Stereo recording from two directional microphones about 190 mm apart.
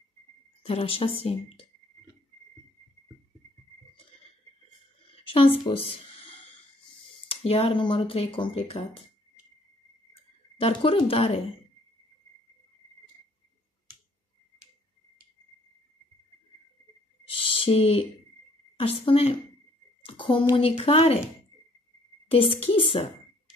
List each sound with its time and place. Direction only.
0.7 s speech: 30° left (ahead or behind)
5.1 s a sound: 30° left (ahead or behind)
7.2 s speech: 30° left (ahead or behind)
10.6 s speech: 30° left (ahead or behind)
17.4 s a sound: 30° left (ahead or behind)
18.8 s speech: 30° left (ahead or behind)
20.1 s a sound: 25° left (ahead or behind)
20.5 s speech: 30° left (ahead or behind)
22.3 s speech: 30° left (ahead or behind)